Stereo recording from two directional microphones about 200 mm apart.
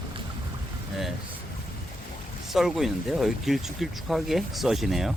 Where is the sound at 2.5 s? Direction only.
Centre (ahead or behind).